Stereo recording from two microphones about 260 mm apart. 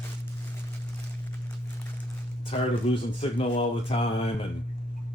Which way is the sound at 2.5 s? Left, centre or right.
Left.